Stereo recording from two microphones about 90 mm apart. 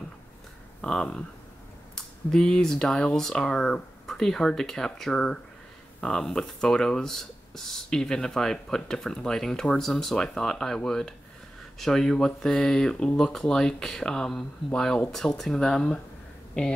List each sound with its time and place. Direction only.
0.7 s speech: 10° left (ahead or behind)